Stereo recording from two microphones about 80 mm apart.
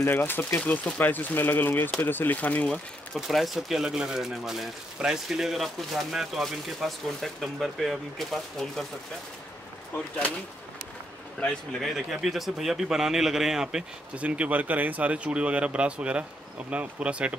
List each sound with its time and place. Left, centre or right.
0.0 s speech: left
3.2 s speech: centre
11.3 s speech: centre